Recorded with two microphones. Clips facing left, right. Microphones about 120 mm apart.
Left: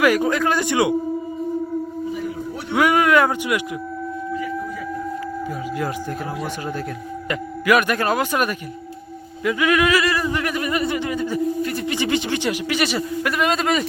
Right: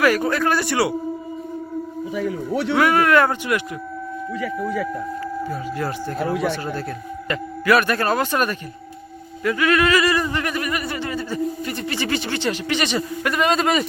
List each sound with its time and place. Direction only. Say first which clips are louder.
0.0 s a man's voice: left 1 dB; 15° left (ahead or behind)
2.1 s speech: right 4 dB; 90° right
2.7 s a man's voice: left 1 dB; 15° left (ahead or behind)
4.4 s speech: right 3 dB; 85° right
5.5 s a man's voice: even; 10° left (ahead or behind)
6.3 s speech: right 6 dB; 75° right (ahead or behind)
7.3 s a man's voice: even; 15° left (ahead or behind)
10.0 s speech: right 1 dB; centre (ahead or behind)
10.5 s a man's voice: left 3 dB; 25° left (ahead or behind)
11.6 s speech: left 3 dB; centre (ahead or behind)
11.9 s a man's voice: left 1 dB; 15° left (ahead or behind); by 13.8 s centre (ahead or behind)